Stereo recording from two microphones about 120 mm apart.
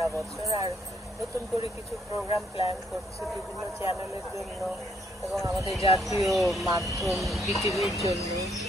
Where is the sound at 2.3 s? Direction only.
50° left (ahead or behind).